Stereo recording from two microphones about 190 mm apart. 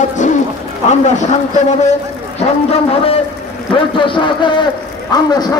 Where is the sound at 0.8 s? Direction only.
40° left (ahead or behind).